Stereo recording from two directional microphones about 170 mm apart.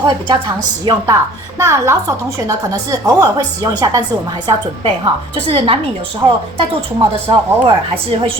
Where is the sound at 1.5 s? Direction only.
15° right (ahead or behind); by 5.7 s 35° right (ahead or behind).